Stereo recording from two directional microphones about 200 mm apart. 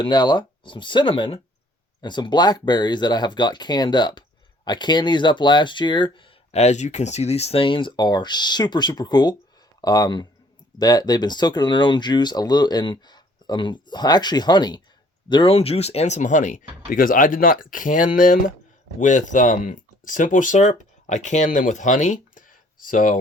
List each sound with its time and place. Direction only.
0.0 s speech: 20° left (ahead or behind); by 23.2 s 40° left (ahead or behind)